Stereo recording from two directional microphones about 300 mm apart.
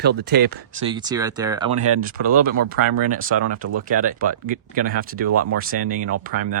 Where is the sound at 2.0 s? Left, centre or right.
Right.